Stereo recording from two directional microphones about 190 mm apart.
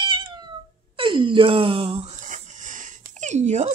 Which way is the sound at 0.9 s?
25° right (ahead or behind).